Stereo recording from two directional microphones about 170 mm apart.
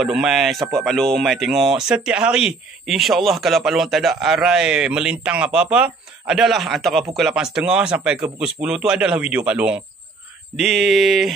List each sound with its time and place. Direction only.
0.0 s speech: centre (ahead or behind)